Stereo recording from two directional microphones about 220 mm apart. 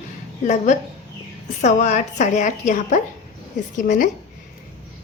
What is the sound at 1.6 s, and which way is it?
A woman's voice, 30° left (ahead or behind).